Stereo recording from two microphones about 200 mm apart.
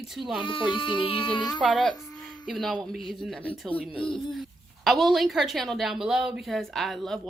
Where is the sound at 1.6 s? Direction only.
Centre (ahead or behind).